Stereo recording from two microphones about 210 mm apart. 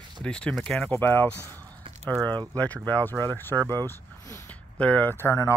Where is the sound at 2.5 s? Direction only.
5° left (ahead or behind).